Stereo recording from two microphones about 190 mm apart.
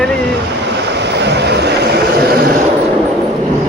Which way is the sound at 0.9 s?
65° right (ahead or behind).